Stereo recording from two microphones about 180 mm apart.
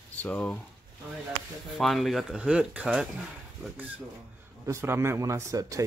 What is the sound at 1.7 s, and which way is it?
Speech, centre (ahead or behind).